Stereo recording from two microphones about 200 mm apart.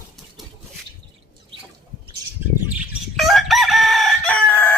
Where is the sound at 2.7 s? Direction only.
Centre (ahead or behind).